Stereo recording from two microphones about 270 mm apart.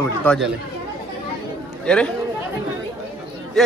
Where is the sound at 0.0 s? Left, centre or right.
Centre.